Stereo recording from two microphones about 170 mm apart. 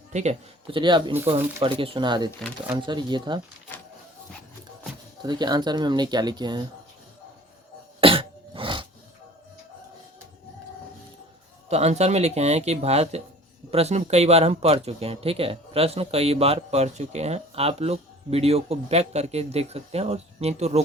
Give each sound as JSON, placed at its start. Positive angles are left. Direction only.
{"t": 0.1, "sound": "speech", "side_deg": -40}
{"t": 0.7, "sound": "speech", "side_deg": -30}
{"t": 5.2, "sound": "speech", "side_deg": -25}
{"t": 8.0, "sound": "cough", "side_deg": -30}
{"t": 11.7, "sound": "speech", "side_deg": -40}